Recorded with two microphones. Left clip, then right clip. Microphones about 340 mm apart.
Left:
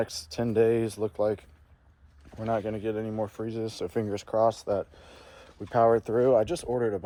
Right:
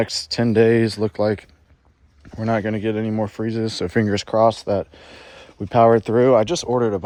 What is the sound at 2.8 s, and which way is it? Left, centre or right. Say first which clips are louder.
Speech: right 8 dB; right.